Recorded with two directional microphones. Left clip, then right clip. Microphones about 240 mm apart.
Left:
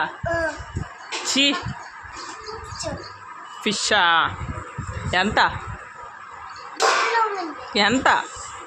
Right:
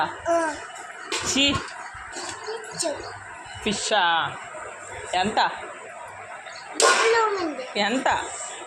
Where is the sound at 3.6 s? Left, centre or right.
Centre.